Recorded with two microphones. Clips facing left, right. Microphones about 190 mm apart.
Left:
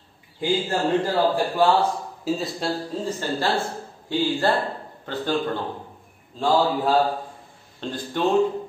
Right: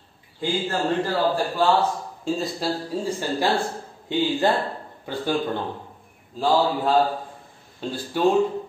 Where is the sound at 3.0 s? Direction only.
15° right (ahead or behind).